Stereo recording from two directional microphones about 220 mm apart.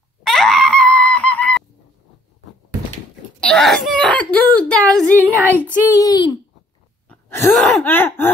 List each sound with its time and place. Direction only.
0.2 s screaming: centre (ahead or behind)
3.3 s a sound: 5° left (ahead or behind)
5.4 s child singing: 10° right (ahead or behind)
5.9 s throat clearing: 15° left (ahead or behind)
7.1 s groan: 10° left (ahead or behind)
7.4 s throat clearing: centre (ahead or behind)